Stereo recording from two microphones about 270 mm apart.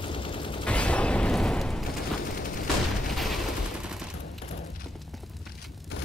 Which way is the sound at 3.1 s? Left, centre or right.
Centre.